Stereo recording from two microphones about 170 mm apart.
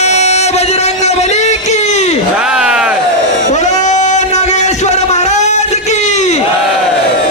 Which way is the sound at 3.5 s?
45° left (ahead or behind).